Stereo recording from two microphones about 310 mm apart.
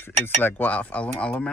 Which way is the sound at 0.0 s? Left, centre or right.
Centre.